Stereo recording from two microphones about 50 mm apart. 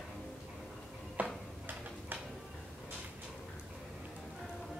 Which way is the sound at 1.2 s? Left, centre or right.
Right.